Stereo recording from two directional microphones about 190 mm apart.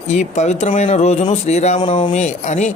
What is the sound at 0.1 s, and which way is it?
Speech, 35° left (ahead or behind).